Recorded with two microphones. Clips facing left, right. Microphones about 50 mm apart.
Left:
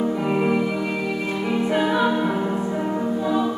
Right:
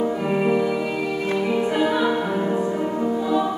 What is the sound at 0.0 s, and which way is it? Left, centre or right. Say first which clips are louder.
Music: even; centre.